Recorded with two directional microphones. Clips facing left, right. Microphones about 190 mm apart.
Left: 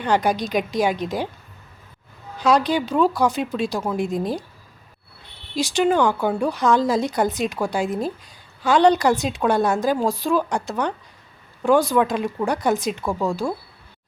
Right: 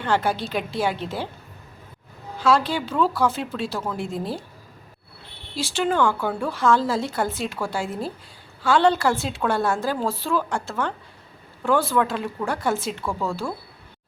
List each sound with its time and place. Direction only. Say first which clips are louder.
0.0 s a woman's voice: left 3 dB; 15° left (ahead or behind)
2.4 s a woman's voice: left 2 dB; 20° left (ahead or behind)
5.5 s a woman's voice: left 4 dB; 15° left (ahead or behind)